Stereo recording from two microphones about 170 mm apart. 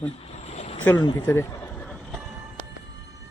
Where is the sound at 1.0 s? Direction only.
25° left (ahead or behind).